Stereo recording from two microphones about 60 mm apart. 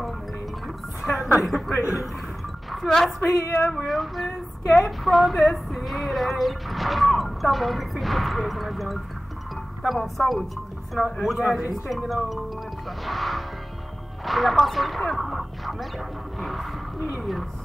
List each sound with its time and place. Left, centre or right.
1.4 s speech: centre
3.2 s speech: left
3.6 s speech: centre
11.2 s speech: centre